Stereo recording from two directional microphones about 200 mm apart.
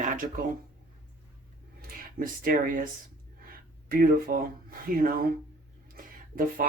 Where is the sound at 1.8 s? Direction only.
45° right (ahead or behind).